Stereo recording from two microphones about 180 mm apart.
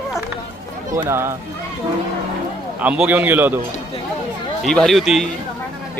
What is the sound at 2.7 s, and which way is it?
Speech, 5° right (ahead or behind).